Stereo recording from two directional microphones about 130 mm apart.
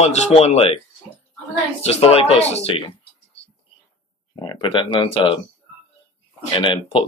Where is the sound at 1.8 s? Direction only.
50° left (ahead or behind).